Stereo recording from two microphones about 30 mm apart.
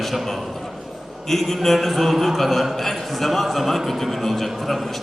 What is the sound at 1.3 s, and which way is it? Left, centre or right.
A man's voice, centre.